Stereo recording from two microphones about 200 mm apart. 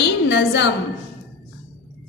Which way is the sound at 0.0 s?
60° left (ahead or behind).